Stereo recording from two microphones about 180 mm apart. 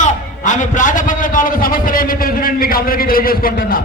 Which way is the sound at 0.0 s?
45° left (ahead or behind).